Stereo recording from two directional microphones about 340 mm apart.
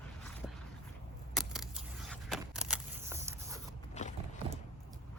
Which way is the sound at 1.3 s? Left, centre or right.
Centre.